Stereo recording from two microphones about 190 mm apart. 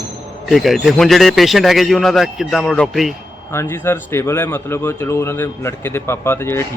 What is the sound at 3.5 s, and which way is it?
Speech, 15° left (ahead or behind).